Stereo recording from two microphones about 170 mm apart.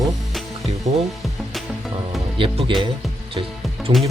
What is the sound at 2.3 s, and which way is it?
Speech, 30° right (ahead or behind).